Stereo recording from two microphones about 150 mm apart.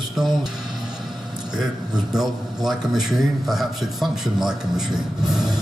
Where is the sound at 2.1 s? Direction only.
Centre (ahead or behind).